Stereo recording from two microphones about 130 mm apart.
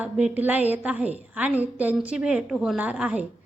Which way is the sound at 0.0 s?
10° right (ahead or behind).